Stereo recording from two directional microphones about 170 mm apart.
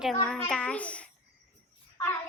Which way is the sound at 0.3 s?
5° left (ahead or behind).